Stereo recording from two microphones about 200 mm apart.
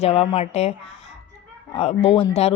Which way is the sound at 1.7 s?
30° left (ahead or behind).